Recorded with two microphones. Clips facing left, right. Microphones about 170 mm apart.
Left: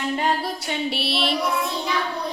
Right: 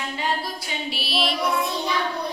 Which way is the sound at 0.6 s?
65° left (ahead or behind).